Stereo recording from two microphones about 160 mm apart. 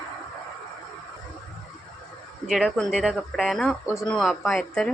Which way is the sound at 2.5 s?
Centre (ahead or behind).